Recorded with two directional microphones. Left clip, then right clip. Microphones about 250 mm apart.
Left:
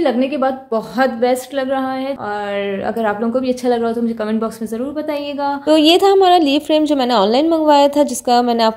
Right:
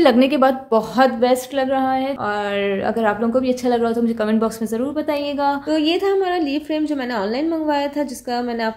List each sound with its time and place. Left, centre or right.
0.0 s a woman's voice: centre
5.7 s a woman's voice: left